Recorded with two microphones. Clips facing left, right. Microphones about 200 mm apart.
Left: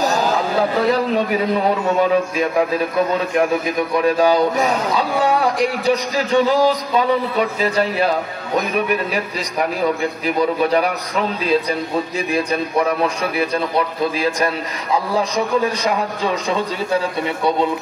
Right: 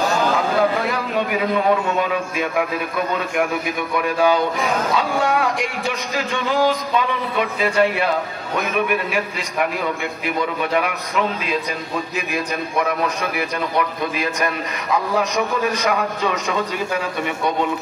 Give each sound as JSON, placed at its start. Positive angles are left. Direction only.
{"t": 0.0, "sound": "a sound", "side_deg": 40}
{"t": 4.2, "sound": "speech", "side_deg": 35}
{"t": 10.2, "sound": "speech", "side_deg": 35}
{"t": 13.4, "sound": "speech", "side_deg": 30}